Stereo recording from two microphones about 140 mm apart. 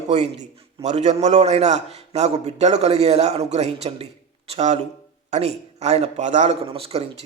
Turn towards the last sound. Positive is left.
turn(degrees=-45)  # may be behind; listen again after turning